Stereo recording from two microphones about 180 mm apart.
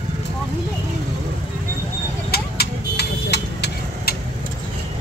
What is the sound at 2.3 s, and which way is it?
Vehicle, 65° left (ahead or behind).